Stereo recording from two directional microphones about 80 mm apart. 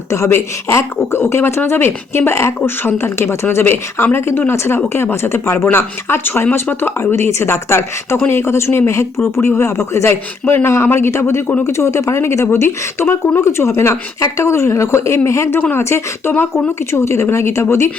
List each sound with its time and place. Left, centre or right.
0.1 s speech: left